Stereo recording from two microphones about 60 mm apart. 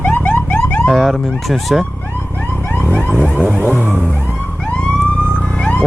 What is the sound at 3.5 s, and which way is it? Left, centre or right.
Vehicle, right.